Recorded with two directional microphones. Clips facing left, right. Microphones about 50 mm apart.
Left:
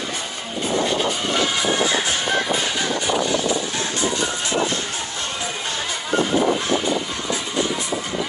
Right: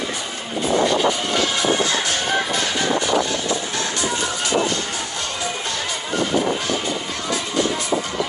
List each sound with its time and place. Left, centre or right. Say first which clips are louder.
1.9 s music: even; centre